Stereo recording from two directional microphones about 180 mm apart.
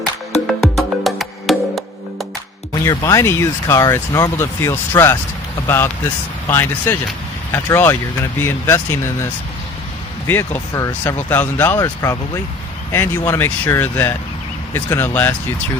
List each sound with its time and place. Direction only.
0.6 s music: centre (ahead or behind)
2.8 s speech: 20° left (ahead or behind)